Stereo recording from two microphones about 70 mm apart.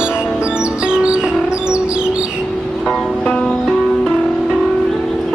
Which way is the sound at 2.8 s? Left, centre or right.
Centre.